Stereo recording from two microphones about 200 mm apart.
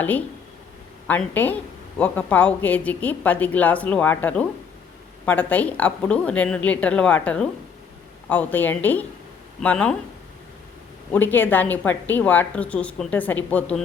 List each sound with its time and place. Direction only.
1.0 s a woman's voice: 10° left (ahead or behind)
11.1 s a woman's voice: 10° left (ahead or behind)